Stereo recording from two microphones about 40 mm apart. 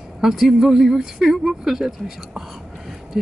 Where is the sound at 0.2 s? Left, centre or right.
Centre.